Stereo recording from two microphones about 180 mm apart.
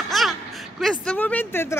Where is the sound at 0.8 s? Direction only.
5° left (ahead or behind).